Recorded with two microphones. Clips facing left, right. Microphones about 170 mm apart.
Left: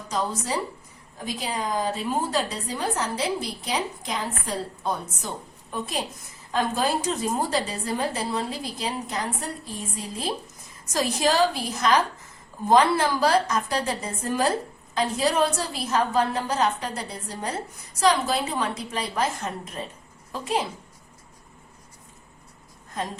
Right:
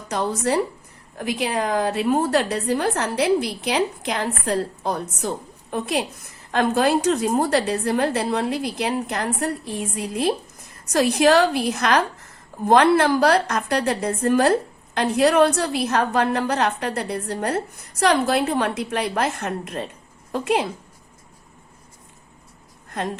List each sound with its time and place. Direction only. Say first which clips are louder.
0.1 s a woman's voice: right 6 dB; 70° right (ahead or behind)
22.9 s speech: right 4 dB; 65° right (ahead or behind)